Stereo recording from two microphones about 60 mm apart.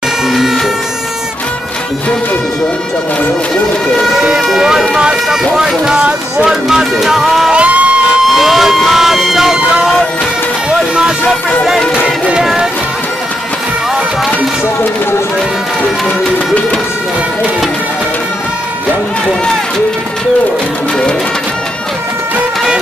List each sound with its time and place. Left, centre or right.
0.3 s a sound: centre
4.1 s speech: centre
7.5 s music: right
8.3 s speech: centre
10.7 s speech: centre